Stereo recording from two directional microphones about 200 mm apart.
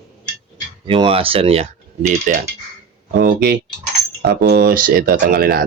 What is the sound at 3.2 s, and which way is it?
Speech, 50° right (ahead or behind).